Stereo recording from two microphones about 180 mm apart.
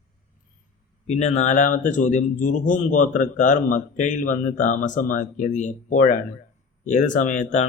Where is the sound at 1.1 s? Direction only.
40° left (ahead or behind).